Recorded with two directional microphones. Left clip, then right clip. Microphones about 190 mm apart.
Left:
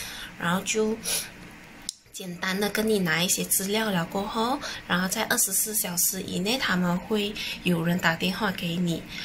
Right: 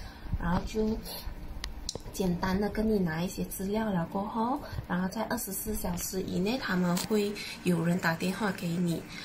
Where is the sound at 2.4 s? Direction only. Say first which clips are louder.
Left 8 dB; 15° left (ahead or behind).